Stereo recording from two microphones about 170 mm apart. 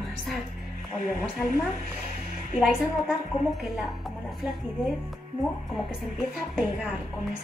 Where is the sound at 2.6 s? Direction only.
Centre (ahead or behind).